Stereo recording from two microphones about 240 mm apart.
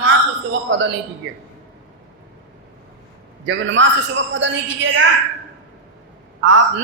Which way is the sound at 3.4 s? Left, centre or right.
Right.